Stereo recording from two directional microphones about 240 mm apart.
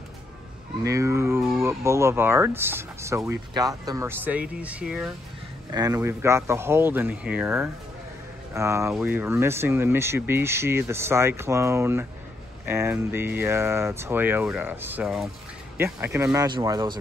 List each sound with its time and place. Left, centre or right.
0.8 s speech: centre